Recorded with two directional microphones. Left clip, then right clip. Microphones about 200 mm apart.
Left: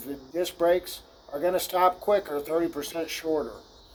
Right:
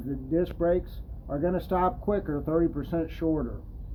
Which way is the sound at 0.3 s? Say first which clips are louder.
Left 2 dB; 25° left (ahead or behind).